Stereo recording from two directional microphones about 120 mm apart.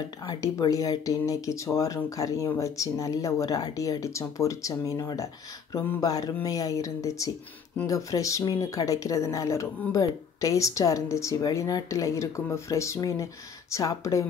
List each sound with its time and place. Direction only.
0.3 s speech: 30° left (ahead or behind)